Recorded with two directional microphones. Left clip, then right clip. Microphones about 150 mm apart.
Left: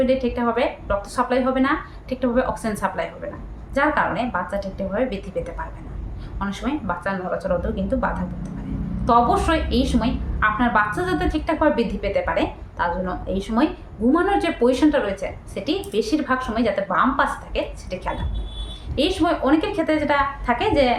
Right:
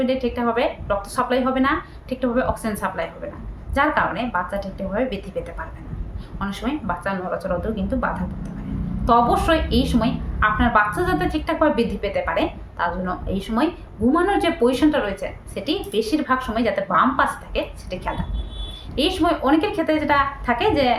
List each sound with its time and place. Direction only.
0.0 s a woman's voice: 10° right (ahead or behind)